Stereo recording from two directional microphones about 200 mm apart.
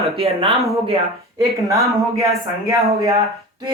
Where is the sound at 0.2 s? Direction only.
30° right (ahead or behind).